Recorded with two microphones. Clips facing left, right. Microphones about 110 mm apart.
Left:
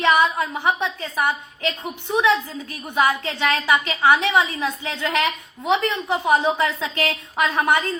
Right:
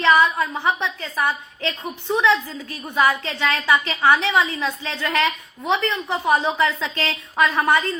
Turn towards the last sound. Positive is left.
turn(degrees=20)  # may be behind; listen again after turning